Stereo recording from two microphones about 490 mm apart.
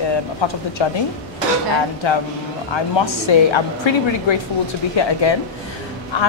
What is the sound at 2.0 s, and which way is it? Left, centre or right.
A woman's voice, left.